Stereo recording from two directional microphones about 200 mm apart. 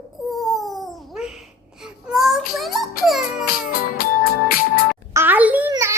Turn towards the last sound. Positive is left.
turn(degrees=-15)  # may be behind; listen again after turning